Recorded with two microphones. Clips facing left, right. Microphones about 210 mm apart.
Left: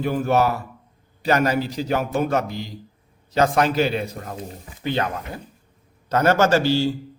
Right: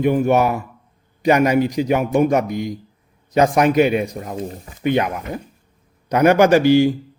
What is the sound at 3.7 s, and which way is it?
A man's voice, 15° right (ahead or behind).